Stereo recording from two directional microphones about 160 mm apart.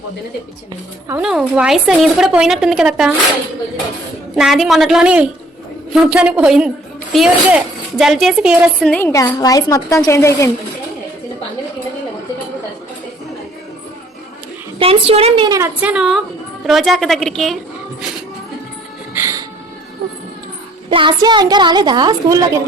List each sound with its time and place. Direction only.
1.2 s a woman's voice: 5° right (ahead or behind)
4.4 s a woman's voice: centre (ahead or behind)
8.9 s a woman's voice: 10° left (ahead or behind)
14.8 s a woman's voice: 35° right (ahead or behind)
15.4 s a woman's voice: 15° right (ahead or behind); by 17.6 s centre (ahead or behind)
19.1 s music: 15° right (ahead or behind)
20.9 s a woman's voice: 30° right (ahead or behind)